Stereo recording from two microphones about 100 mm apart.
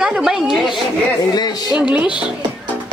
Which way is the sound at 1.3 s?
45° left (ahead or behind).